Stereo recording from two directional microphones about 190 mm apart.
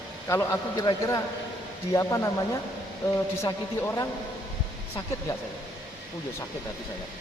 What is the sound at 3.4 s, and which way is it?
Speech, 15° left (ahead or behind).